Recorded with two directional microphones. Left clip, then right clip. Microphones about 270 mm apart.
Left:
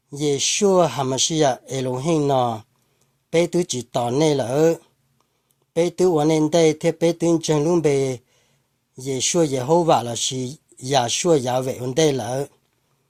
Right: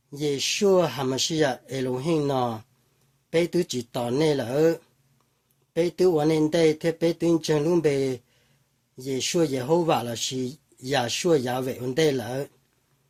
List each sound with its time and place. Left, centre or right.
0.1 s speech: left